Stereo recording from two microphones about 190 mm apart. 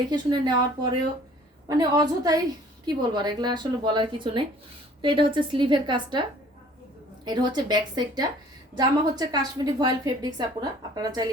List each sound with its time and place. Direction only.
0.1 s a woman's voice: 25° right (ahead or behind)
7.3 s a woman's voice: 20° right (ahead or behind)